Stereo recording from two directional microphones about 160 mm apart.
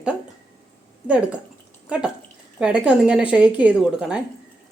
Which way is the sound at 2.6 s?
5° right (ahead or behind).